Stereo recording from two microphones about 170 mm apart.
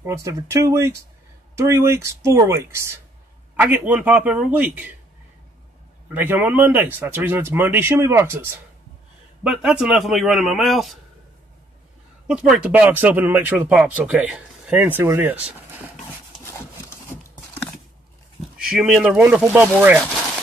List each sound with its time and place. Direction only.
0.0 s speech: 15° right (ahead or behind)
6.1 s a man's voice: 10° right (ahead or behind)
12.3 s speech: 5° right (ahead or behind)
18.8 s speech: 5° right (ahead or behind)